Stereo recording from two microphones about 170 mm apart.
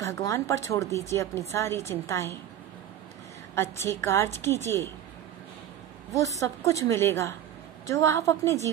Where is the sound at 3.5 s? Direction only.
15° left (ahead or behind).